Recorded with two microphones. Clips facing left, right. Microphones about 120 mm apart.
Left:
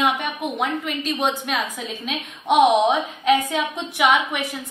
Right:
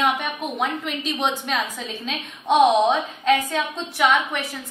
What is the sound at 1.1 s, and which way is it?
A woman's voice, 5° left (ahead or behind).